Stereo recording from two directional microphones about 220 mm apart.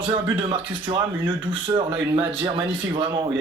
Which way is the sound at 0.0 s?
20° right (ahead or behind).